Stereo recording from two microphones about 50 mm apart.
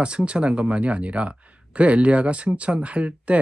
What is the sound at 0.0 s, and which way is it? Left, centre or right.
Speech, right.